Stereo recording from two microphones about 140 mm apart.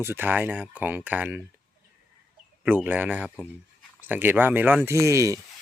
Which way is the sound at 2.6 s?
10° right (ahead or behind).